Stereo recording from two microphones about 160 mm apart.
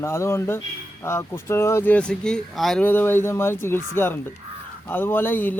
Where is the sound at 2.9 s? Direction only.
15° left (ahead or behind).